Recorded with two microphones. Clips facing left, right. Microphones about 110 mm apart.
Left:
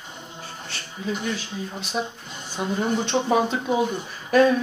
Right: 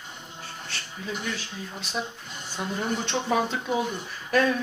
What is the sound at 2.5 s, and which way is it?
Speech, 15° left (ahead or behind).